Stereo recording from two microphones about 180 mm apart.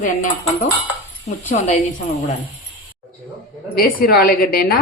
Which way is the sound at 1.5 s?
45° left (ahead or behind).